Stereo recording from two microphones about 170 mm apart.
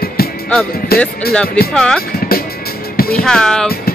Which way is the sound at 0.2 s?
65° left (ahead or behind).